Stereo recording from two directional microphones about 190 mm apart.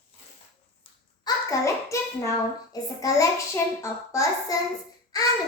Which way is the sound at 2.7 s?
20° left (ahead or behind).